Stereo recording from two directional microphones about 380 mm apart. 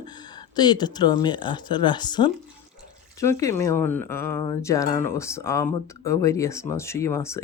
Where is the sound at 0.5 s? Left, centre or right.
Centre.